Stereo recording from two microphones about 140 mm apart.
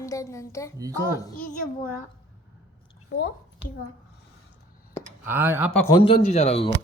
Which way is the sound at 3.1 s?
70° left (ahead or behind).